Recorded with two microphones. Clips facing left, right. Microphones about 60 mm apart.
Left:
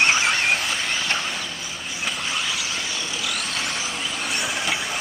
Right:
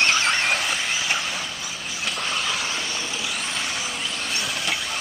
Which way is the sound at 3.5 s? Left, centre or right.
Centre.